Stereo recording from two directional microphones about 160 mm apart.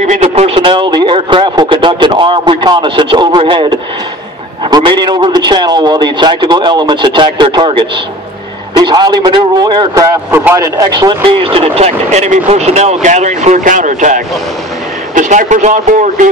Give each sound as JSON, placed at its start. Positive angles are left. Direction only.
{"t": 0.0, "sound": "speech", "side_deg": -45}
{"t": 0.6, "sound": "speech", "side_deg": -30}